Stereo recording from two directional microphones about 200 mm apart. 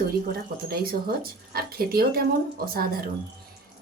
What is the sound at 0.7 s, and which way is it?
Speech, 50° right (ahead or behind).